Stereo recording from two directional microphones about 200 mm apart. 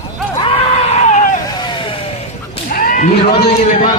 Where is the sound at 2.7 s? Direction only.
45° left (ahead or behind).